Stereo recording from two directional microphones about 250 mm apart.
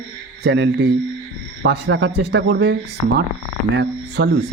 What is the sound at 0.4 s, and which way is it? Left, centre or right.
Speech, right.